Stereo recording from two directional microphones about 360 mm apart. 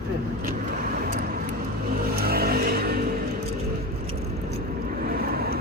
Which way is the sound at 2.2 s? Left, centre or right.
Right.